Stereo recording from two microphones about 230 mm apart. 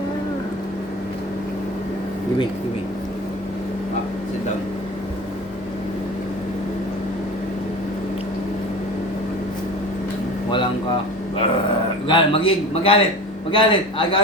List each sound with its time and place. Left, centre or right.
12.0 s a man's voice: left